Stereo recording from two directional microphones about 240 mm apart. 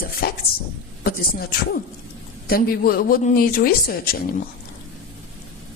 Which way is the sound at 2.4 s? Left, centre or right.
Left.